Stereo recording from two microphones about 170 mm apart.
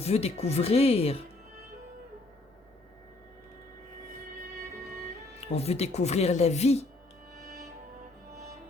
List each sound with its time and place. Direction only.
0.0 s speech: 35° left (ahead or behind)
5.5 s speech: 35° left (ahead or behind)